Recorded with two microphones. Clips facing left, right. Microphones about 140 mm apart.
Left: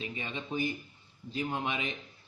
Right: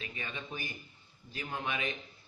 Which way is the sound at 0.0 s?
20° left (ahead or behind).